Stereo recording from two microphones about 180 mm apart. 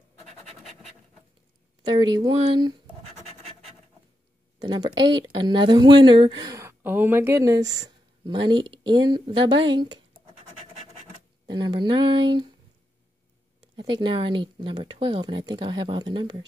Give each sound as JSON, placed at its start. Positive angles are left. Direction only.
{"t": 1.9, "sound": "speech", "side_deg": -25}
{"t": 4.6, "sound": "speech", "side_deg": -25}
{"t": 10.1, "sound": "scratch", "side_deg": -45}
{"t": 11.5, "sound": "speech", "side_deg": -25}
{"t": 13.7, "sound": "speech", "side_deg": -25}